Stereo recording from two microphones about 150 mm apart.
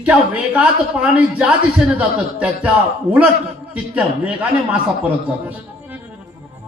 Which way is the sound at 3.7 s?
10° right (ahead or behind).